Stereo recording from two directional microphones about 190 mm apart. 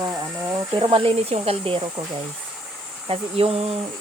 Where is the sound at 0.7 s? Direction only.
30° right (ahead or behind).